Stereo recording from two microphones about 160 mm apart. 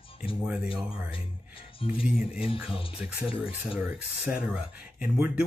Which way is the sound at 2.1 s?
5° right (ahead or behind).